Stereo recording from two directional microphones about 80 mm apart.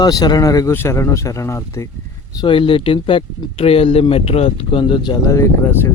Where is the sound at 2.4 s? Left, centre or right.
Left.